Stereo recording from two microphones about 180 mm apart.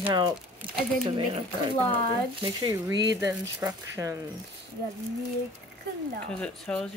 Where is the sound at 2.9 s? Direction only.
75° right (ahead or behind).